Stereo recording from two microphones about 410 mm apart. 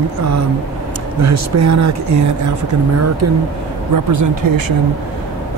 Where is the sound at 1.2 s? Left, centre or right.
Right.